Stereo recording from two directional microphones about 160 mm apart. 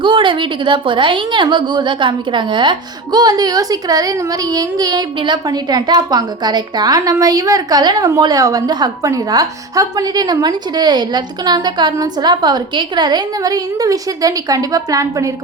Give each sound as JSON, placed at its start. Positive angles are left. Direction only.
{"t": 0.0, "sound": "a woman's voice", "side_deg": -30}